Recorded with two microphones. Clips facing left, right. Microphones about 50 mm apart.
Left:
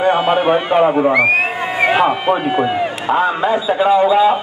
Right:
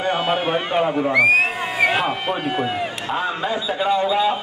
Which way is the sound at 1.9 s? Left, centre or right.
Centre.